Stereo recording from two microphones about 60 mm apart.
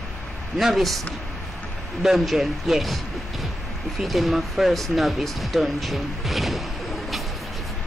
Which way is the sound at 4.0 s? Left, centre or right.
Centre.